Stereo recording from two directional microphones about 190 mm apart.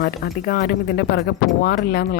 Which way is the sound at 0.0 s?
55° left (ahead or behind).